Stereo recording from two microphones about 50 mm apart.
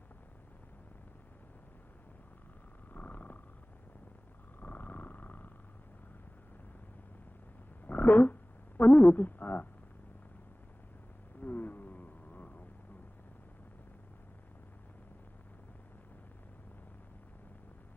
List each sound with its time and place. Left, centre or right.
2.9 s purr: left
4.6 s purr: left
7.9 s a sound: left
8.8 s speech: left
11.3 s wild animals: left